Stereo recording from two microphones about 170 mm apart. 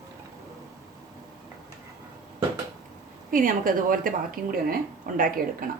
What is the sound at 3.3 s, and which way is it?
A woman's voice, 55° right (ahead or behind).